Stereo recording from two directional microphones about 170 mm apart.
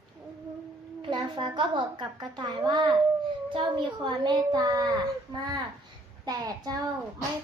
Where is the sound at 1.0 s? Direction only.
30° right (ahead or behind).